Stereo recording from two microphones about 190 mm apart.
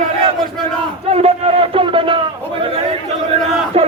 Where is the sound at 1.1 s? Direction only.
30° right (ahead or behind).